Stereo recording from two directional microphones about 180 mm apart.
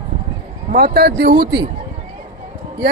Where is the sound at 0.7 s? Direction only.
60° right (ahead or behind).